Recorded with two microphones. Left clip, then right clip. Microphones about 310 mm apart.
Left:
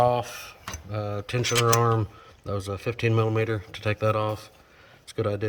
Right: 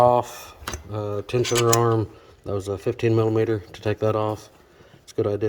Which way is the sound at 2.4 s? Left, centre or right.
Centre.